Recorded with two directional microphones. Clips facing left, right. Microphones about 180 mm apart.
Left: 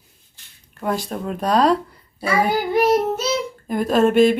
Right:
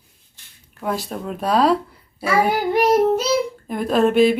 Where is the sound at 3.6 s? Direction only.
Centre (ahead or behind).